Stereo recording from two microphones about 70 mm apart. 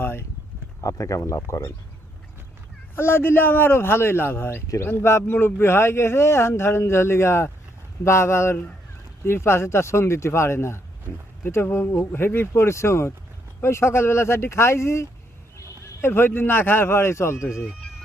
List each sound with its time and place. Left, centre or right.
0.0 s a sound: left
0.8 s speech: left
2.9 s speech: left